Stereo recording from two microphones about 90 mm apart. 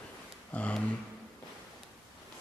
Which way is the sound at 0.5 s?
15° left (ahead or behind).